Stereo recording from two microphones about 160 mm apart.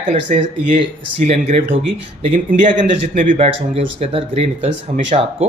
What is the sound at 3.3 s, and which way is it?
Speech, 40° right (ahead or behind).